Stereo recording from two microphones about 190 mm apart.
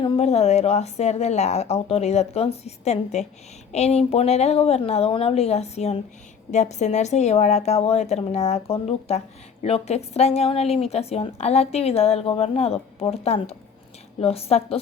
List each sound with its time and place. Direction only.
0.0 s a woman's voice: 35° left (ahead or behind)